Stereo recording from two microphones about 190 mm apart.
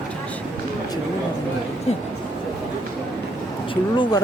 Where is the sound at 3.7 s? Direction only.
25° left (ahead or behind).